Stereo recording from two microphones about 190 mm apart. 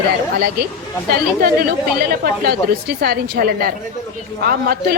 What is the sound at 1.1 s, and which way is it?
A woman's voice, 50° right (ahead or behind).